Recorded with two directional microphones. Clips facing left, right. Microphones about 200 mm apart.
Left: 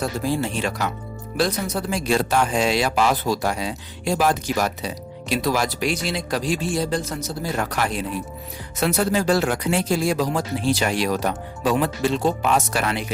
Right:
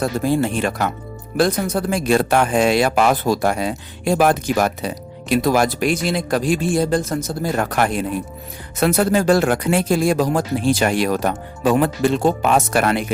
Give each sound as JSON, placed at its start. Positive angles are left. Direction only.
{"t": 0.0, "sound": "speech", "side_deg": -55}